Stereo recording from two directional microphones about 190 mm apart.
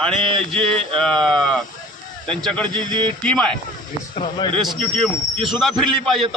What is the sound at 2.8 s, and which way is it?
Speech, 25° right (ahead or behind).